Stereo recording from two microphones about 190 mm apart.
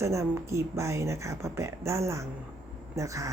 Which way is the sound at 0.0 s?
15° right (ahead or behind).